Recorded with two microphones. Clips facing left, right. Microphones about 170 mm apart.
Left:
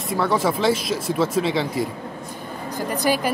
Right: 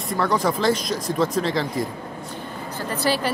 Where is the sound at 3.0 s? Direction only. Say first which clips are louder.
Left 1 dB; 15° left (ahead or behind).